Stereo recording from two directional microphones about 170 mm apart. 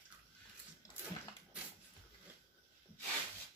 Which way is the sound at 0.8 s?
20° left (ahead or behind).